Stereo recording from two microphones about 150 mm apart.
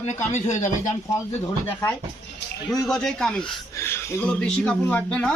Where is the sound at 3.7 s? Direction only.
15° left (ahead or behind).